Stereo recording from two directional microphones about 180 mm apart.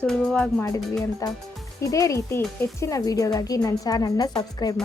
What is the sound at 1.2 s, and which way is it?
A woman's voice, 20° left (ahead or behind).